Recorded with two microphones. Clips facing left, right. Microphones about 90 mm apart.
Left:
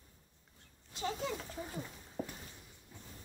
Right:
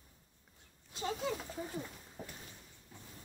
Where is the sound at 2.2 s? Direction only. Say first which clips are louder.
Left 7 dB; 5° left (ahead or behind).